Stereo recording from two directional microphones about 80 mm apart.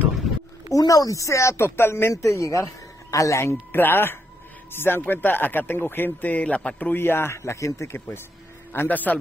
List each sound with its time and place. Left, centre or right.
0.7 s speech: left
8.7 s speech: left